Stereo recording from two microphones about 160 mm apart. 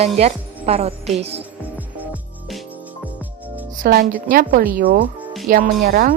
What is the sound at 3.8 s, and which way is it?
A woman's voice, 60° right (ahead or behind).